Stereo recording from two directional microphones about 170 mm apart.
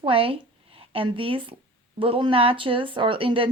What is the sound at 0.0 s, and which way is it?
A woman's voice, 30° right (ahead or behind).